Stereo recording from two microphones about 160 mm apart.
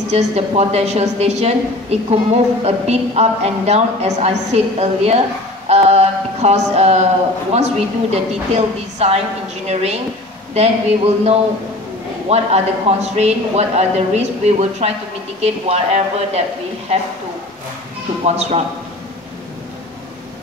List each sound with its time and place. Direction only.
0.1 s a woman's voice: 40° right (ahead or behind)
5.7 s a sound: 40° right (ahead or behind)
7.5 s a woman's voice: 45° right (ahead or behind)
12.3 s a woman's voice: 40° right (ahead or behind)
18.2 s a woman's voice: 40° right (ahead or behind)